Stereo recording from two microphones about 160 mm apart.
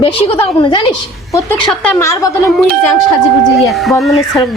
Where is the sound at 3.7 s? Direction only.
Centre (ahead or behind).